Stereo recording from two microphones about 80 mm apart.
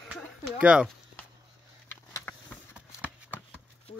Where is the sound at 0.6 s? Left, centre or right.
Centre.